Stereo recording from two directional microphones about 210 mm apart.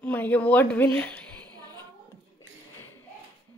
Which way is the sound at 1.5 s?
20° right (ahead or behind).